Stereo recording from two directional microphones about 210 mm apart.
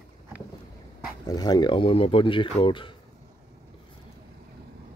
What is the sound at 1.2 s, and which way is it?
Speech, 20° left (ahead or behind).